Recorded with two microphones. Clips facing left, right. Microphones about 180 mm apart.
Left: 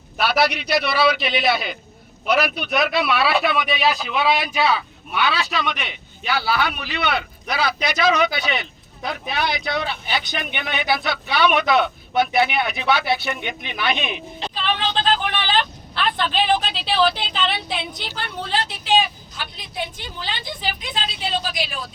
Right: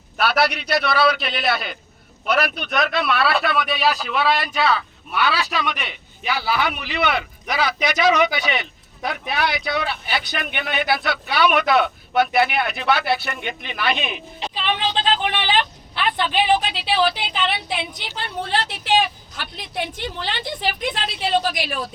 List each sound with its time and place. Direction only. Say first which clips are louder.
0.2 s speech: even; centre (ahead or behind)
6.5 s speech: right 2 dB; 15° right (ahead or behind)
14.5 s a sound: even; 15° right (ahead or behind)
17.3 s speech: right 1 dB; 15° right (ahead or behind)
18.9 s speech: even; 65° right (ahead or behind)